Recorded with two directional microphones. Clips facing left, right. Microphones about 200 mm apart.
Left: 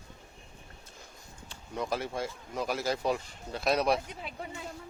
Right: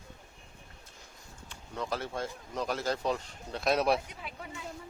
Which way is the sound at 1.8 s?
10° left (ahead or behind).